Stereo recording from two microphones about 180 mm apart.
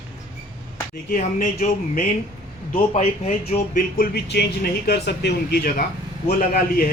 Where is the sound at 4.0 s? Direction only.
65° left (ahead or behind); by 6.8 s 50° left (ahead or behind).